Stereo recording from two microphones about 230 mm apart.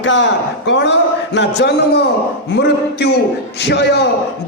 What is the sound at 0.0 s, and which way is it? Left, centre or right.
Speech, left.